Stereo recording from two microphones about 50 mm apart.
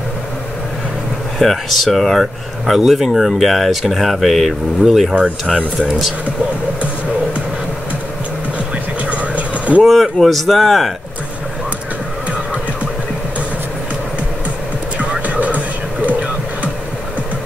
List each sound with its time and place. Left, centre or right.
1.4 s speech: centre
9.0 s vehicle: right
9.8 s speech: centre
15.0 s hum: right